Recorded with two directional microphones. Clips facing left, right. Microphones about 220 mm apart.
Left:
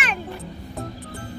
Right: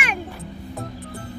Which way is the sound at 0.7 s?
Centre (ahead or behind).